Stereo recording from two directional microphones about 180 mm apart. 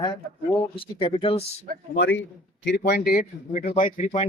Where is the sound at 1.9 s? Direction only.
90° left.